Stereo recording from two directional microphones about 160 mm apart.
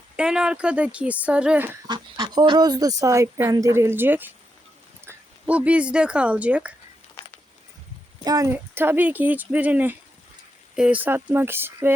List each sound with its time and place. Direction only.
0.2 s speech: 5° right (ahead or behind)
1.9 s speech: 25° right (ahead or behind); by 6.7 s 10° right (ahead or behind)
7.2 s a sound: 30° left (ahead or behind)
8.2 s speech: 20° right (ahead or behind)